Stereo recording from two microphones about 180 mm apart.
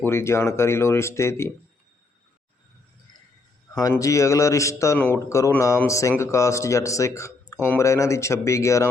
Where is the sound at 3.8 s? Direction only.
20° left (ahead or behind).